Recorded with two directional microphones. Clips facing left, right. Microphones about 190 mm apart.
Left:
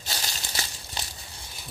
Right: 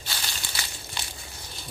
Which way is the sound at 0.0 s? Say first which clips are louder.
Left 1 dB; 40° left (ahead or behind).